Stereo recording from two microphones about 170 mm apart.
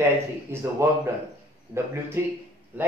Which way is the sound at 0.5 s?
15° right (ahead or behind).